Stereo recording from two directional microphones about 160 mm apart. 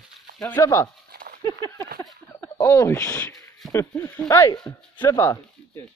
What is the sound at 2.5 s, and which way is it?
Speech, 15° left (ahead or behind).